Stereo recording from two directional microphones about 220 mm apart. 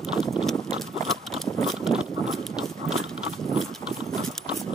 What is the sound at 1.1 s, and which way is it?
Horse, centre (ahead or behind).